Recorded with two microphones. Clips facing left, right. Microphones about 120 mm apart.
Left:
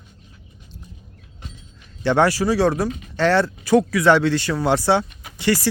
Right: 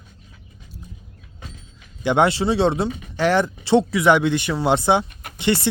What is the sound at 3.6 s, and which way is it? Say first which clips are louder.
Speech: left 1 dB; 25° right (ahead or behind).